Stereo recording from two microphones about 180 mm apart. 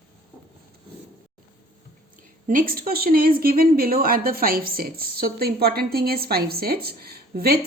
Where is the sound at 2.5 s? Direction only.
50° right (ahead or behind).